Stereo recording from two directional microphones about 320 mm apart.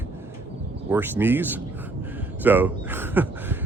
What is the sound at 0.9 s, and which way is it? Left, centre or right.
Speech, centre.